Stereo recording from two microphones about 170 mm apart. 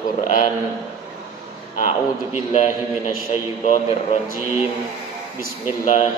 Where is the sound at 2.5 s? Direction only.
40° left (ahead or behind).